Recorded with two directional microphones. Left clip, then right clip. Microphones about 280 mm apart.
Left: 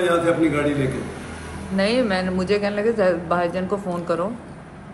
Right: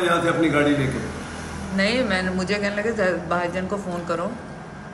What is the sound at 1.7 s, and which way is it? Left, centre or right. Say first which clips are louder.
Speech: left 1 dB; centre.